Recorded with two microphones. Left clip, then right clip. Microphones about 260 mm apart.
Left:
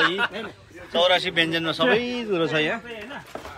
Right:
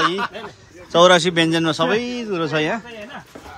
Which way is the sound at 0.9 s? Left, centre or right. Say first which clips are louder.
Right 7 dB; centre.